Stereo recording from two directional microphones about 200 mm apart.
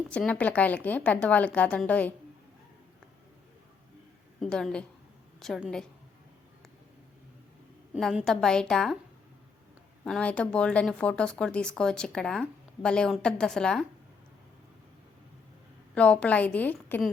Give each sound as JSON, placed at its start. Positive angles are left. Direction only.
{"t": 0.1, "sound": "a woman's voice", "side_deg": 5}
{"t": 4.4, "sound": "a woman's voice", "side_deg": 5}
{"t": 7.9, "sound": "speech", "side_deg": 0}
{"t": 10.0, "sound": "speech", "side_deg": 5}
{"t": 16.0, "sound": "a woman's voice", "side_deg": 5}